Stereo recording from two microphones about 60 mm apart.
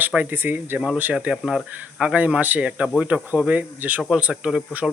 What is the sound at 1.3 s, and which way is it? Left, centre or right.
Speech, centre.